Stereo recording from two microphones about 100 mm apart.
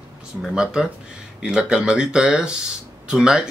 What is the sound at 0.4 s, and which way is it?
Speech, 5° right (ahead or behind).